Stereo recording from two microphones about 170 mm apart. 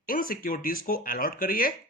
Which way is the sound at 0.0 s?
55° left (ahead or behind).